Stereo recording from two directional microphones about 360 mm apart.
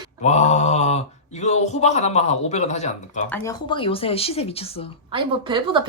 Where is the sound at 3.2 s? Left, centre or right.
Centre.